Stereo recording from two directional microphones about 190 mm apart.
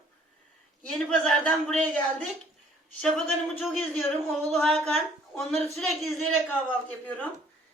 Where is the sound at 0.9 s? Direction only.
5° left (ahead or behind).